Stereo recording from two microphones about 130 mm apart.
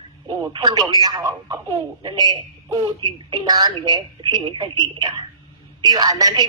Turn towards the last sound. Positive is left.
turn(degrees=-30)  # may be behind; listen again after turning